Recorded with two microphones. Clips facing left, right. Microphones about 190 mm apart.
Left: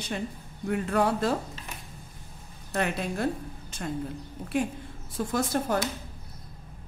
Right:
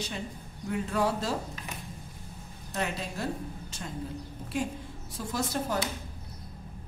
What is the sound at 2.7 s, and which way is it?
A woman's voice, 60° left (ahead or behind).